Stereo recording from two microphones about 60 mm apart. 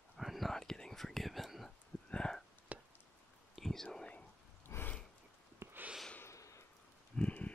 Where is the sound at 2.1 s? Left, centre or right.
Centre.